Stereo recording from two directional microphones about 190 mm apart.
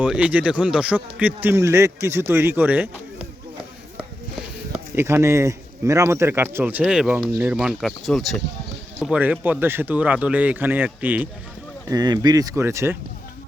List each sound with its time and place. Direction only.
0.0 s speech: 5° right (ahead or behind)
4.9 s speech: 15° right (ahead or behind)
11.9 s speech: 20° right (ahead or behind)